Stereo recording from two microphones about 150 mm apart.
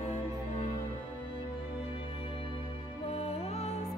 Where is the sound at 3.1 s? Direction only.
45° left (ahead or behind).